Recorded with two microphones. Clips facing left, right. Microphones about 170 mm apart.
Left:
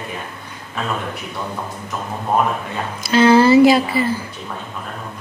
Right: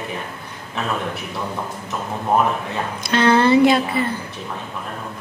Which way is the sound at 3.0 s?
5° left (ahead or behind).